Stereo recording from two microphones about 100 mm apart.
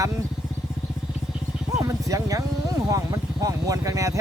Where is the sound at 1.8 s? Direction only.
35° right (ahead or behind).